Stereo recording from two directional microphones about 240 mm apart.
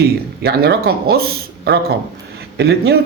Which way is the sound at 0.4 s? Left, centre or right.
Right.